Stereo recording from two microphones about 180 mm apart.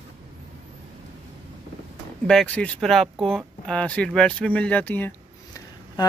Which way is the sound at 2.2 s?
5° left (ahead or behind).